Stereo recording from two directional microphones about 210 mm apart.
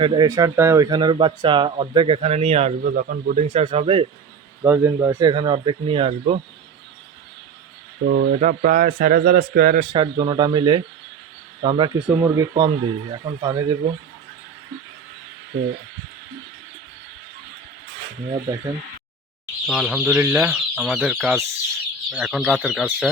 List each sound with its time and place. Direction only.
0.0 s speech: 20° right (ahead or behind)
2.8 s speech: 45° right (ahead or behind); by 4.0 s 25° right (ahead or behind)
4.6 s speech: 10° right (ahead or behind)
8.1 s a man's voice: 40° right (ahead or behind)
9.9 s speech: 20° right (ahead or behind)
12.0 s speech: 15° right (ahead or behind)
19.6 s speech: centre (ahead or behind)